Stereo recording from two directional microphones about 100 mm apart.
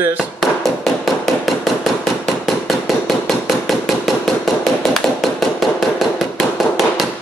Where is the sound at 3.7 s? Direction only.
Centre (ahead or behind).